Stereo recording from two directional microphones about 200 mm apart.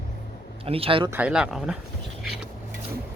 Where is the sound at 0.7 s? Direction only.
30° right (ahead or behind).